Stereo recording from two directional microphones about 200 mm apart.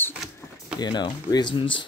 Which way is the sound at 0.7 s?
20° left (ahead or behind).